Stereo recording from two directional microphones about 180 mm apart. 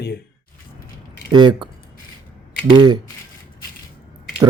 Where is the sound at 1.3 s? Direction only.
25° right (ahead or behind).